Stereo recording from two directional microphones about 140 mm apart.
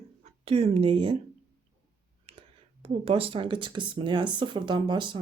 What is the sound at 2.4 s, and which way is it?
Speech, 45° right (ahead or behind).